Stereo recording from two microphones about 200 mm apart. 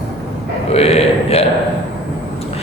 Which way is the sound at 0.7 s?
30° left (ahead or behind).